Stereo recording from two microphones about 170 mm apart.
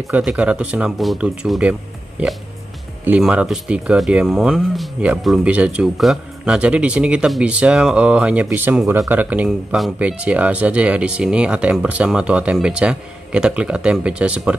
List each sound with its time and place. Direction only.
0.1 s speech: 5° right (ahead or behind)
3.1 s speech: 5° right (ahead or behind)